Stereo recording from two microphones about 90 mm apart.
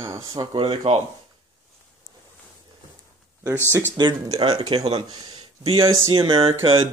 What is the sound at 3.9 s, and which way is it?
Speech, 60° right (ahead or behind).